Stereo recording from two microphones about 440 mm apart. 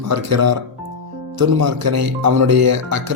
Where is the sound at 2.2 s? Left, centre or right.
Right.